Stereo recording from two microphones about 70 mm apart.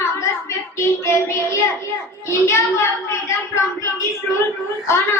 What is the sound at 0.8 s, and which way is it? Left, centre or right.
A woman's voice, left.